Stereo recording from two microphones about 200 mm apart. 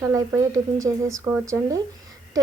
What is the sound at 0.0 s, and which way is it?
A woman's voice, 15° right (ahead or behind).